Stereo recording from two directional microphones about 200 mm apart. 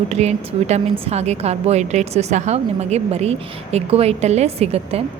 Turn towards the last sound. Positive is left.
turn(degrees=-30)  # may be behind; listen again after turning